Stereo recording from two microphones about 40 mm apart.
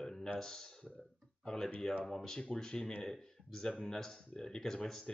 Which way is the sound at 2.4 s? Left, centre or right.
Centre.